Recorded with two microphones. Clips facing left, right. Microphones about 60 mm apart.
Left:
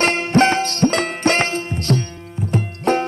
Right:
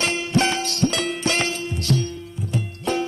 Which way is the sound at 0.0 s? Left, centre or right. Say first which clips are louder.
Left 6 dB; left.